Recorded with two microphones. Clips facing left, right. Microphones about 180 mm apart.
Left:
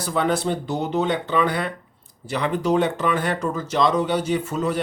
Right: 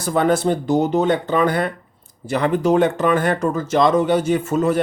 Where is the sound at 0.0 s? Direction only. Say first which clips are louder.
Right 5 dB; 50° right (ahead or behind).